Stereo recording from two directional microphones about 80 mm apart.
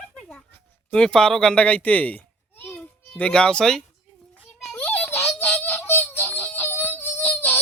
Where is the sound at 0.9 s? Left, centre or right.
Centre.